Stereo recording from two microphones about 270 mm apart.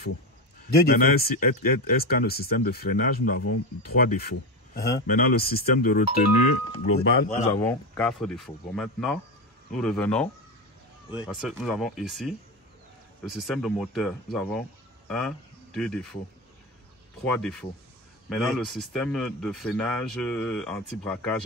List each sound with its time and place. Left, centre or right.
0.8 s speech: left
7.6 s speech: centre
17.2 s speech: centre